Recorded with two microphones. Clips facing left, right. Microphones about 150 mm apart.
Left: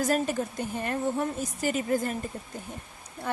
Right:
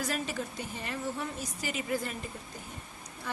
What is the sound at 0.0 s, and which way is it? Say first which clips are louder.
A woman's voice: left 8 dB; 45° left (ahead or behind).